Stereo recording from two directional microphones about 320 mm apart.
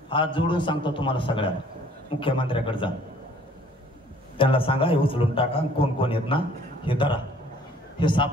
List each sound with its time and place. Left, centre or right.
0.1 s a man's voice: centre
4.4 s a man's voice: centre